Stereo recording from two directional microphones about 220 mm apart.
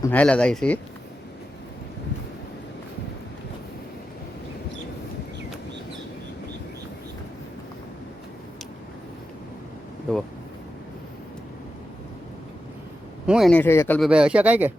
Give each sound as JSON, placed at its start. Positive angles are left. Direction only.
{"t": 0.0, "sound": "speech", "side_deg": 5}
{"t": 10.1, "sound": "a sound", "side_deg": 5}
{"t": 13.2, "sound": "speech", "side_deg": 0}
{"t": 14.1, "sound": "speech", "side_deg": -5}